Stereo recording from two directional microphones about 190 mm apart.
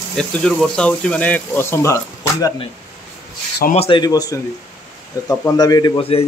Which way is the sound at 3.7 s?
30° left (ahead or behind).